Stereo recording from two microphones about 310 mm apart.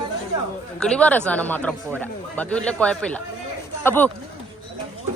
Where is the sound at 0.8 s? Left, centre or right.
Centre.